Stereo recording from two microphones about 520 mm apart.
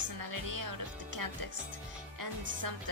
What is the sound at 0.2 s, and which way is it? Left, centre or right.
Speech, right.